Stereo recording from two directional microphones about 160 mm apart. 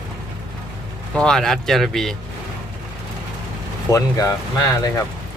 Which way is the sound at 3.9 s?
20° left (ahead or behind).